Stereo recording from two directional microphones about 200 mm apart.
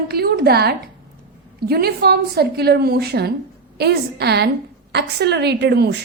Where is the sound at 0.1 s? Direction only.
50° right (ahead or behind).